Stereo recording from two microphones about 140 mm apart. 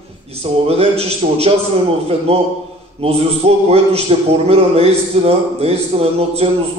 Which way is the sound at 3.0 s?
45° right (ahead or behind).